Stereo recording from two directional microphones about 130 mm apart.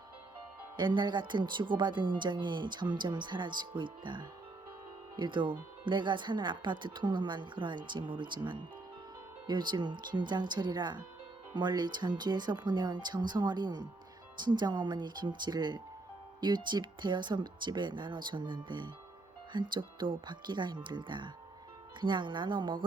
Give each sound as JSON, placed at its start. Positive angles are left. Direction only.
{"t": 0.8, "sound": "speech", "side_deg": -35}